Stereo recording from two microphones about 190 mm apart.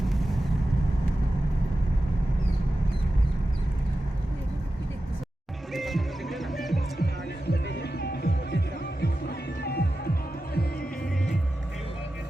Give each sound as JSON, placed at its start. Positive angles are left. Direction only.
{"t": 0.0, "sound": "vehicle", "side_deg": 0}
{"t": 5.7, "sound": "music", "side_deg": 0}
{"t": 7.0, "sound": "music", "side_deg": 55}